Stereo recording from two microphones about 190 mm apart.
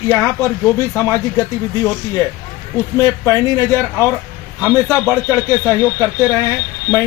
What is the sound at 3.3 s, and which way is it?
Speech, 15° right (ahead or behind).